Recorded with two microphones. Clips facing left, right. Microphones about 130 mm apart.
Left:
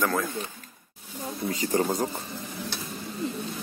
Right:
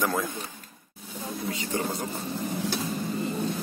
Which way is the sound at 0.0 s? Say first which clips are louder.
Left 1 dB; 15° right (ahead or behind).